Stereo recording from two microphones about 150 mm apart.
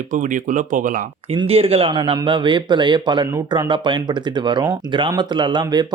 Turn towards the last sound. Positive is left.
turn(degrees=-30)  # may be behind; listen again after turning